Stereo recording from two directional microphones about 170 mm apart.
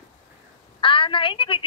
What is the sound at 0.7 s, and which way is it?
Speech, 30° left (ahead or behind).